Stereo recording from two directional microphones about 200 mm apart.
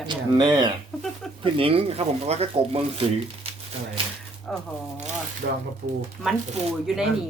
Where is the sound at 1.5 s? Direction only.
30° right (ahead or behind).